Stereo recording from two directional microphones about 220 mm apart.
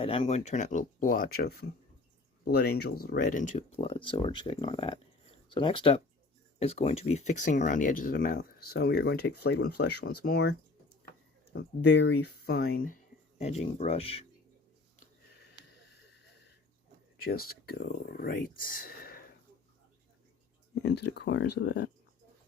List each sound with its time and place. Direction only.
0.0 s speech: 25° left (ahead or behind); by 10.5 s 50° left (ahead or behind)
11.5 s speech: 50° left (ahead or behind)
13.4 s speech: 30° left (ahead or behind)
17.2 s speech: 40° left (ahead or behind)
21.0 s speech: 50° left (ahead or behind)